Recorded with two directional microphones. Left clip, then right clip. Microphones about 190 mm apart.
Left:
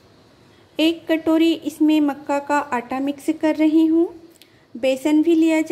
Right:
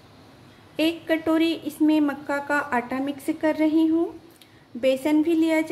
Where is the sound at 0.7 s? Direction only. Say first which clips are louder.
Left 4 dB; 20° left (ahead or behind).